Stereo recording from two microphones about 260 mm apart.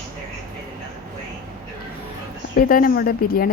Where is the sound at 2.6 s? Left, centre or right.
Left.